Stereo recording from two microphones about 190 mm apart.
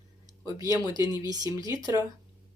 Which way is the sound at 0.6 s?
15° right (ahead or behind).